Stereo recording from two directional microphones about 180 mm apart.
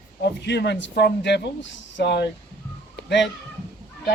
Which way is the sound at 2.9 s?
75° left (ahead or behind).